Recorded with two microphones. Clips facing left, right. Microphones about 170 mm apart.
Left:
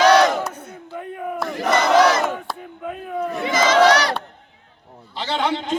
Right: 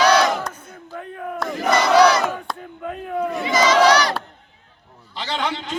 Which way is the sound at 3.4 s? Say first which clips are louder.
Right 1 dB; 55° left (ahead or behind).